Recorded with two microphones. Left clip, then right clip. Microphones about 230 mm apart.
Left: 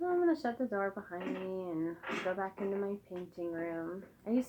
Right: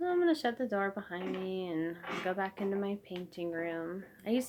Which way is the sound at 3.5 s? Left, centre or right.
Right.